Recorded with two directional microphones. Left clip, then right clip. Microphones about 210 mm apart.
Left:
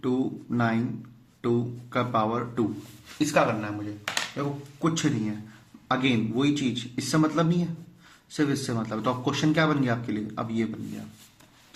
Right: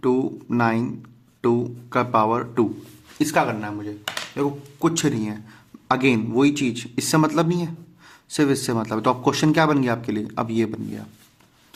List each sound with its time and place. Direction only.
0.0 s a man's voice: 55° right (ahead or behind)
3.2 s a man's voice: 35° right (ahead or behind)